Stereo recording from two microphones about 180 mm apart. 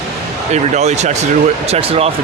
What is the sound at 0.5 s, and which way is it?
Speech, 40° right (ahead or behind).